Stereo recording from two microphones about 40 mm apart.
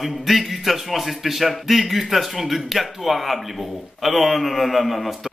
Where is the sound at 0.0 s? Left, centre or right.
Centre.